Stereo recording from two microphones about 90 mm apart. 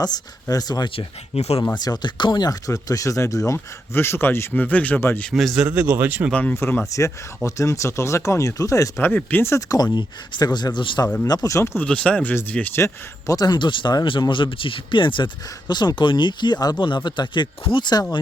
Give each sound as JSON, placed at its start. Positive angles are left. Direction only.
{"t": 0.4, "sound": "speech", "side_deg": 45}
{"t": 4.9, "sound": "speech", "side_deg": 25}
{"t": 5.3, "sound": "a man's voice", "side_deg": 0}
{"t": 5.5, "sound": "speech", "side_deg": -15}
{"t": 6.3, "sound": "speech", "side_deg": 15}
{"t": 7.4, "sound": "speech", "side_deg": 35}
{"t": 9.0, "sound": "speech", "side_deg": 20}
{"t": 9.6, "sound": "speech", "side_deg": 45}
{"t": 11.4, "sound": "speech", "side_deg": 30}
{"t": 11.9, "sound": "speech", "side_deg": 10}
{"t": 12.8, "sound": "speech", "side_deg": 40}
{"t": 15.7, "sound": "speech", "side_deg": 55}
{"t": 16.8, "sound": "speech", "side_deg": 60}